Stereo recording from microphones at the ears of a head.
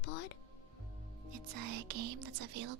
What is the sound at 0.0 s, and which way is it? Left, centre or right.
Music, left.